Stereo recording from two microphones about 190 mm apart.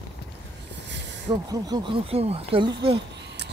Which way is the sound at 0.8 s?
65° right (ahead or behind).